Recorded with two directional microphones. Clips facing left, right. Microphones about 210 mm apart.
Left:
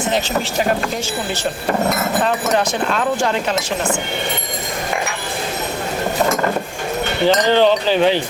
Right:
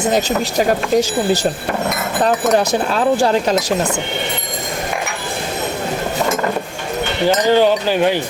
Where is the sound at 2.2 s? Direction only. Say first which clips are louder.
Right 7 dB; 35° right (ahead or behind).